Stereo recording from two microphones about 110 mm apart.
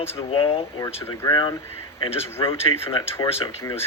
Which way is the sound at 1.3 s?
40° left (ahead or behind).